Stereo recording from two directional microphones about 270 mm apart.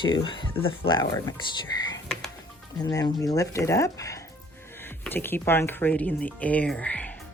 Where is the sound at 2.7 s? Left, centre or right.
Centre.